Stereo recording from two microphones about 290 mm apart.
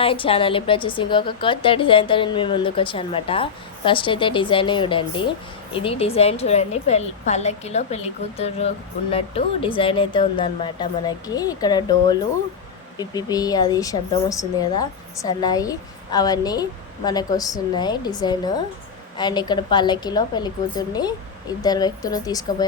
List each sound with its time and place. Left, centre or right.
0.0 s a woman's voice: centre